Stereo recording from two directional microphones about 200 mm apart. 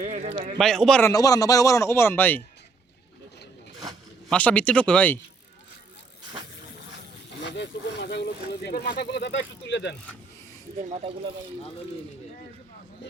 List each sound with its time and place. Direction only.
0.0 s speech: 35° right (ahead or behind)
0.6 s speech: 5° left (ahead or behind)
1.1 s speech: 15° left (ahead or behind)
4.3 s speech: 5° left (ahead or behind)
7.5 s speech: 60° left (ahead or behind)
10.8 s speech: 30° right (ahead or behind)